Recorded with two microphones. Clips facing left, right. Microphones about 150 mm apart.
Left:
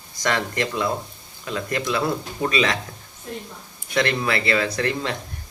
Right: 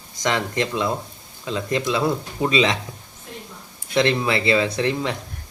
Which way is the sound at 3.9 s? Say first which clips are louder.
Right 3 dB; 25° right (ahead or behind).